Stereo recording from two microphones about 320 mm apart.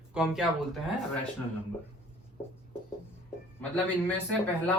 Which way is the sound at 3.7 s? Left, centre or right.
Centre.